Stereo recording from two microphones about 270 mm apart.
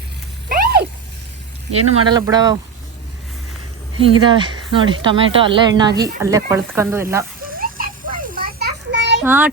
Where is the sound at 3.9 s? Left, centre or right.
Centre.